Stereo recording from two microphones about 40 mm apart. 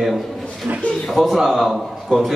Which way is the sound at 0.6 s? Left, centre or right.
Right.